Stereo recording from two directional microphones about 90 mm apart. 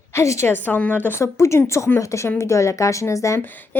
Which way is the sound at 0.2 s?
30° left (ahead or behind).